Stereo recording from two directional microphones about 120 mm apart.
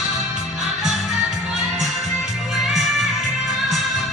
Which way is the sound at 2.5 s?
Centre (ahead or behind).